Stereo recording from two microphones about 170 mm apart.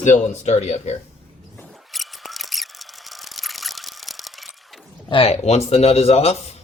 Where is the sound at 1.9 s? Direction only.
Centre (ahead or behind).